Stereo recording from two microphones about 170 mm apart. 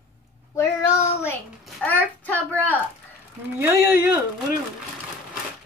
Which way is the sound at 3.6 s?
15° right (ahead or behind).